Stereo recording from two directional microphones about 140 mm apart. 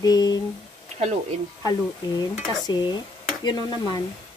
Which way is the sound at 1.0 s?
50° right (ahead or behind).